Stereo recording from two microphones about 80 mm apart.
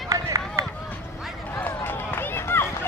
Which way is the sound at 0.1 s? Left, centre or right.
Right.